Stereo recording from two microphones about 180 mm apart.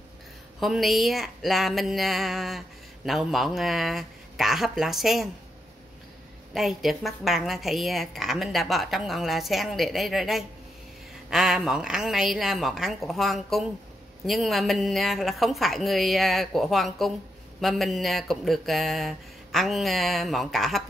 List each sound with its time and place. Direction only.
0.6 s a woman's voice: centre (ahead or behind)
6.5 s a woman's voice: centre (ahead or behind)